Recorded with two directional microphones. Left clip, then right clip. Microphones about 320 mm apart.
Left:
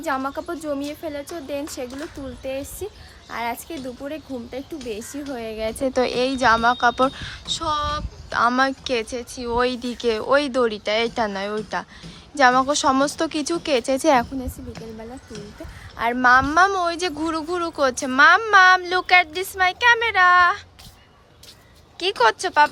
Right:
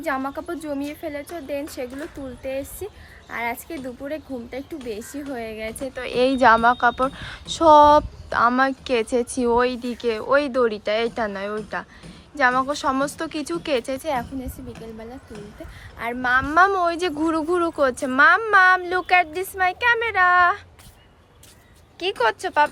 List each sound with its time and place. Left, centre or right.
0.0 s a woman's voice: centre
5.6 s speech: centre
6.1 s a woman's voice: centre
16.0 s a woman's voice: left
16.4 s a woman's voice: centre
21.9 s a woman's voice: centre